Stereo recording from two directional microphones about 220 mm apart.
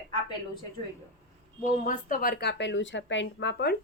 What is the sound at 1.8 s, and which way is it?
Speech, 35° left (ahead or behind).